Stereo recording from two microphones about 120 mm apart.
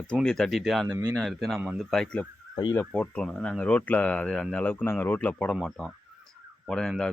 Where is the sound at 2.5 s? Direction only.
40° left (ahead or behind).